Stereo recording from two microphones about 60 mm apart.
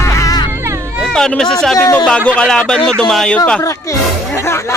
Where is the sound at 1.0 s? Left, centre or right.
Centre.